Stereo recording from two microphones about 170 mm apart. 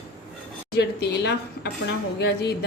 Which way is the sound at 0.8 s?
85° left.